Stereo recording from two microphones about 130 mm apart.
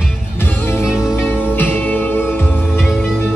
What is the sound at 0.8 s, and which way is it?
Music, 5° right (ahead or behind).